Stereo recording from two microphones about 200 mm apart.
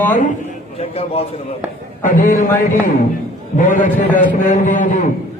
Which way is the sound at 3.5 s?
40° left (ahead or behind).